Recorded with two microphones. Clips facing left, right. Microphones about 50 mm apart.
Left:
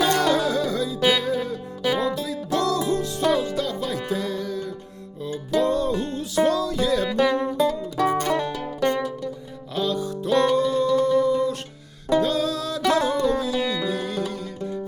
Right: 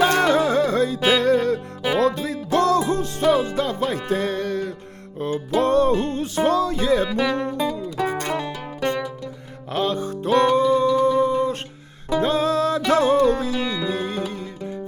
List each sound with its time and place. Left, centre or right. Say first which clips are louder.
0.0 s music: right 3 dB; right
2.1 s music: right 3 dB; right
7.5 s music: left 2 dB; centre
8.8 s music: left 1 dB; right